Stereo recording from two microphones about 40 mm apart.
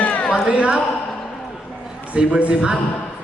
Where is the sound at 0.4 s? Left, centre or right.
Right.